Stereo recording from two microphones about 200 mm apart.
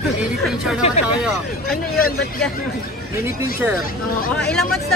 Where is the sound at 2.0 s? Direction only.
45° left (ahead or behind).